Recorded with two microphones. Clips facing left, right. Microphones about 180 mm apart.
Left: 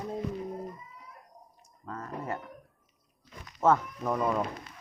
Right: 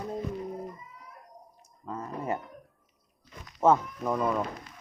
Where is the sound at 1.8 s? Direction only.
15° right (ahead or behind).